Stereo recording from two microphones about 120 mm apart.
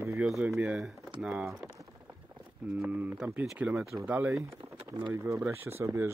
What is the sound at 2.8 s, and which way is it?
Speech, 15° right (ahead or behind).